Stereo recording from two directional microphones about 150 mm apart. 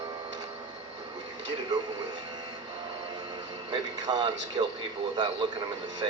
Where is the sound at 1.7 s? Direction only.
25° right (ahead or behind).